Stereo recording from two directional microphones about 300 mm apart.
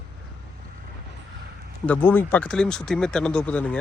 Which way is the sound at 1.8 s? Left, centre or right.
Centre.